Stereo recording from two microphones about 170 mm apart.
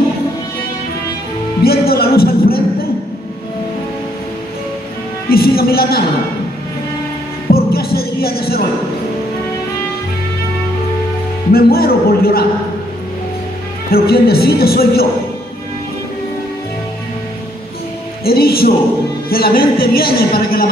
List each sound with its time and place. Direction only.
1.6 s music: 65° left (ahead or behind)
5.3 s speech: 65° left (ahead or behind)
7.5 s music: 65° left (ahead or behind)
11.5 s a woman's voice: 65° left (ahead or behind)
13.8 s a woman's voice: 65° left (ahead or behind)
18.2 s a woman's voice: 65° left (ahead or behind)